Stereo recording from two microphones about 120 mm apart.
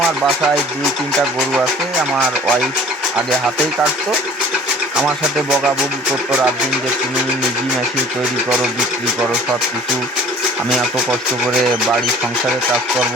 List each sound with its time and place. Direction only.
2.1 s speech: 10° right (ahead or behind)